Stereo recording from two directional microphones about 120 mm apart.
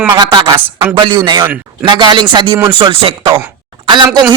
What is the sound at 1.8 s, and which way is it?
A man's voice, 40° right (ahead or behind).